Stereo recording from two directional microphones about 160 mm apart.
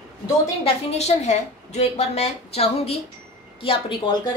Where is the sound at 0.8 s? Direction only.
40° left (ahead or behind).